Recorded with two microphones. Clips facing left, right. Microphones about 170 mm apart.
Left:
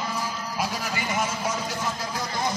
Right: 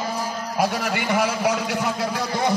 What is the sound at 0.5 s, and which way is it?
A man's voice, 65° right (ahead or behind).